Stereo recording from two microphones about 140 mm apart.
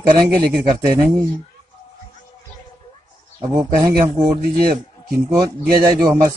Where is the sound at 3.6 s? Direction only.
20° right (ahead or behind).